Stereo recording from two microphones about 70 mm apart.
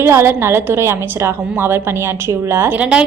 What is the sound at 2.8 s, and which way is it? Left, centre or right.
Speech, centre.